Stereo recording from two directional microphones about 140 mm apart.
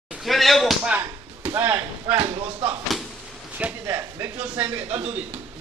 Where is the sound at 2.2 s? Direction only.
45° right (ahead or behind).